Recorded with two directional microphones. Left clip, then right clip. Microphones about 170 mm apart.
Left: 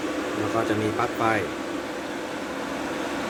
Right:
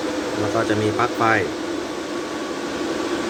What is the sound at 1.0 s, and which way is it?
Speech, 5° left (ahead or behind).